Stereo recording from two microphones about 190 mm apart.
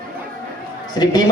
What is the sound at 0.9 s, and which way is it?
Speech, 20° left (ahead or behind).